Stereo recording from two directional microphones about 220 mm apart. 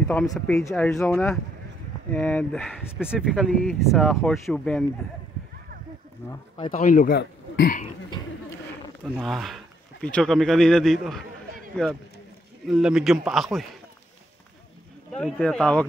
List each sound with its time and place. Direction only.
0.1 s speech: 5° left (ahead or behind)
6.7 s a man's voice: 35° left (ahead or behind)
9.0 s speech: centre (ahead or behind)
15.1 s speech: 5° left (ahead or behind)